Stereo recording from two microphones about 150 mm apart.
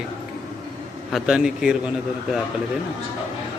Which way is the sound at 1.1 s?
5° right (ahead or behind).